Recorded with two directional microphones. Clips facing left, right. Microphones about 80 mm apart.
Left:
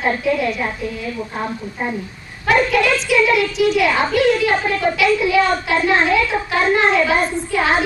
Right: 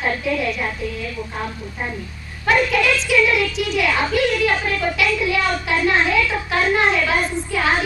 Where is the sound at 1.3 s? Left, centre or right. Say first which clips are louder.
Left 3 dB; centre.